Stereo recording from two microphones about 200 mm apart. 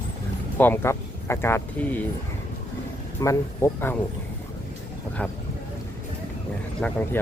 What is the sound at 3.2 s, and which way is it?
Speech, 15° left (ahead or behind).